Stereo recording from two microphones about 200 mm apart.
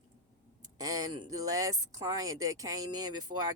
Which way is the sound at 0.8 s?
20° right (ahead or behind).